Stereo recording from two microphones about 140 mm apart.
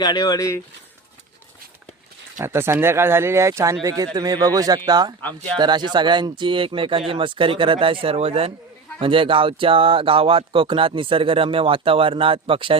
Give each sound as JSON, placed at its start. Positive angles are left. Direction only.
{"t": 0.0, "sound": "speech", "side_deg": 30}
{"t": 2.4, "sound": "speech", "side_deg": -15}